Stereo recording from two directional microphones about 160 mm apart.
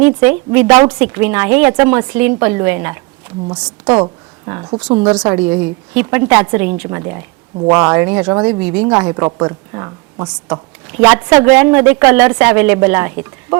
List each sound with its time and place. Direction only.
0.0 s a woman's voice: 10° right (ahead or behind)
7.6 s speech: 30° right (ahead or behind)
7.9 s a woman's voice: 10° right (ahead or behind)
10.2 s a woman's voice: 5° right (ahead or behind)